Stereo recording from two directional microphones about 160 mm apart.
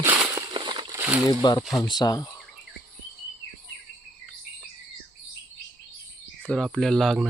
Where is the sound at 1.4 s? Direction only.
25° left (ahead or behind).